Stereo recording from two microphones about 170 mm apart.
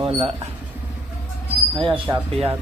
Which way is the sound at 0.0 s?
35° right (ahead or behind).